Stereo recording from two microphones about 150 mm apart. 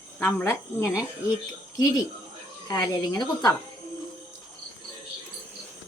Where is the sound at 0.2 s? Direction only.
15° left (ahead or behind).